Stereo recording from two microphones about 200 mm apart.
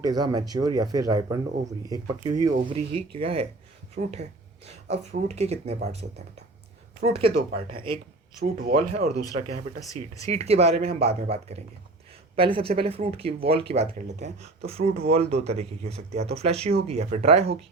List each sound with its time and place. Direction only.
0.0 s speech: 20° right (ahead or behind)
8.5 s speech: 45° right (ahead or behind)
9.8 s speech: 15° left (ahead or behind)
10.3 s speech: 30° right (ahead or behind)